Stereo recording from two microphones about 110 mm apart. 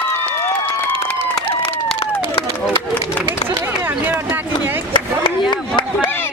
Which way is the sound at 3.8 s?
20° right (ahead or behind).